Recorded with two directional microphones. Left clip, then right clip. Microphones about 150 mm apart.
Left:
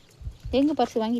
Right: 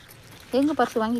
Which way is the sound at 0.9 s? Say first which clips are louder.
Right 1 dB; 25° left (ahead or behind).